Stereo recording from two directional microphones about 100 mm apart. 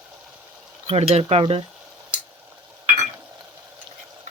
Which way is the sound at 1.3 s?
90° right.